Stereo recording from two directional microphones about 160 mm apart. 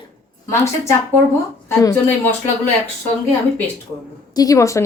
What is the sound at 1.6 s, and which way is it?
Speech, 20° left (ahead or behind).